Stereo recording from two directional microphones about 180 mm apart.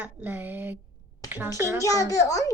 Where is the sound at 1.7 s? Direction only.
20° left (ahead or behind).